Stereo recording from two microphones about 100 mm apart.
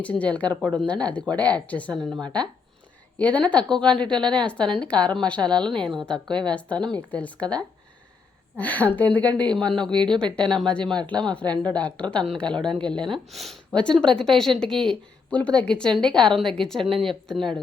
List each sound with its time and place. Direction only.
0.0 s a woman's voice: 15° left (ahead or behind)
9.9 s a woman's voice: 50° right (ahead or behind)
10.3 s a woman's voice: 5° left (ahead or behind)
11.4 s a woman's voice: 45° right (ahead or behind)
11.7 s a woman's voice: 10° left (ahead or behind)